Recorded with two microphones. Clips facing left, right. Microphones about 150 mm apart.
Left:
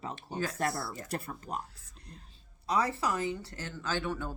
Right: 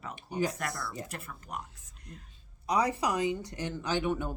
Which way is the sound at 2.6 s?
15° right (ahead or behind).